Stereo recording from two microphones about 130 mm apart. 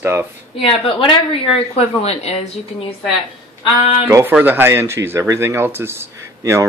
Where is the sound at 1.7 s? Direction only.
55° left (ahead or behind).